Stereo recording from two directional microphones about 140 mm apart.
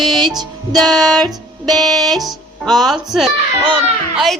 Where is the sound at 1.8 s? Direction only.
Centre (ahead or behind).